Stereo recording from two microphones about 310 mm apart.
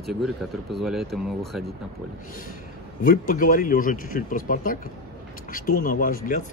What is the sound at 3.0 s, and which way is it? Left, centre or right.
Speech, left.